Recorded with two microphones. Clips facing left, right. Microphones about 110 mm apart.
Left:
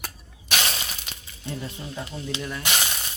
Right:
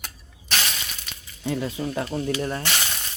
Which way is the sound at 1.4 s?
90° right.